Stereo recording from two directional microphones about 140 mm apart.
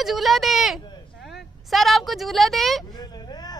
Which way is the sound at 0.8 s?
30° left (ahead or behind).